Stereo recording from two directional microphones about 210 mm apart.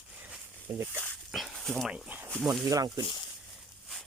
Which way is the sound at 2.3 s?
Centre (ahead or behind).